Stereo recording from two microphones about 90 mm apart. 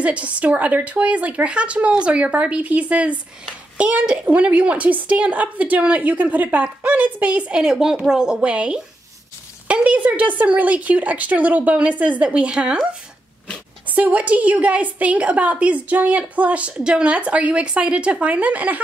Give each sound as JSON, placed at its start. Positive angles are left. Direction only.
{"t": 0.0, "sound": "a woman's voice", "side_deg": -15}